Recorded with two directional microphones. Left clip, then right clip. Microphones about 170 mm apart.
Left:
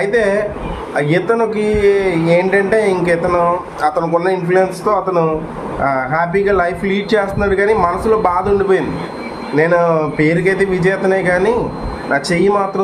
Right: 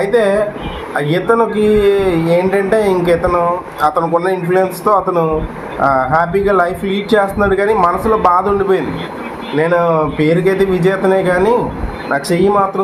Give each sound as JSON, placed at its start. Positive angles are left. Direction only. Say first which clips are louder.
{"t": 0.0, "sound": "speech", "louder": "right 2 dB", "side_deg": -15}